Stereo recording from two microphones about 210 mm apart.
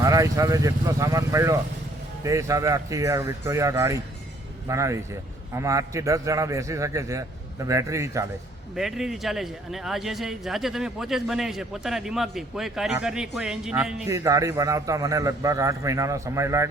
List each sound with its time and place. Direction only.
0.0 s a man's voice: 15° right (ahead or behind)
8.7 s a man's voice: centre (ahead or behind)
14.1 s a man's voice: 15° right (ahead or behind)